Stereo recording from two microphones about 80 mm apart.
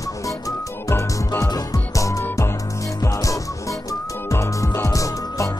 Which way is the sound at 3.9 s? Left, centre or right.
Left.